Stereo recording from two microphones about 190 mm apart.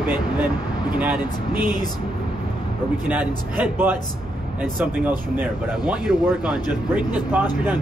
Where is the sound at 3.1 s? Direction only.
10° right (ahead or behind).